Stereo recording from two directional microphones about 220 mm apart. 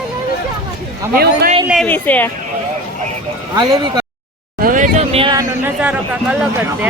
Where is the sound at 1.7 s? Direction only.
5° left (ahead or behind).